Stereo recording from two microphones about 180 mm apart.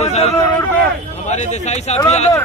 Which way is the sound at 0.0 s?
35° left (ahead or behind).